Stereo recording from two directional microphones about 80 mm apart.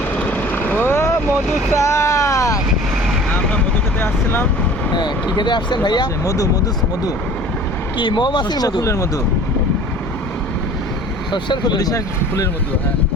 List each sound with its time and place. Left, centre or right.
0.5 s vehicle: left
4.0 s vehicle: left
4.9 s speech: left
6.2 s speech: left
7.9 s speech: left
8.8 s speech: left
11.3 s speech: left